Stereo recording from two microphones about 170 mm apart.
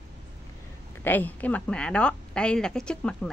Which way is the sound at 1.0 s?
10° left (ahead or behind).